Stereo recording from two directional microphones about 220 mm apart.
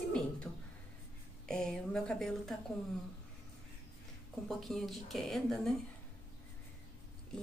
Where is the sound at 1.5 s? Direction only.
5° left (ahead or behind).